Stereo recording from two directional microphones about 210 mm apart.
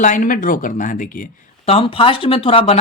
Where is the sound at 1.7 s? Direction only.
25° left (ahead or behind).